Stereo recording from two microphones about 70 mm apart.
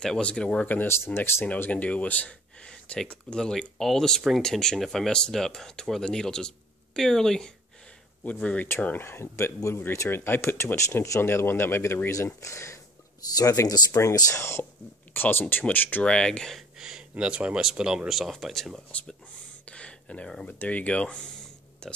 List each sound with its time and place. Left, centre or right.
0.0 s speech: centre
0.8 s speech: left
1.4 s speech: left
8.2 s speech: centre
8.8 s speech: left
13.4 s speech: left
14.4 s speech: left
16.0 s speech: centre
16.5 s a sound: centre
17.2 s speech: centre
18.9 s speech: centre
19.6 s a sound: centre
20.5 s speech: left